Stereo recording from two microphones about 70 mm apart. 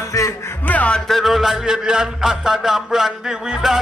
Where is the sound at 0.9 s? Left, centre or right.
Centre.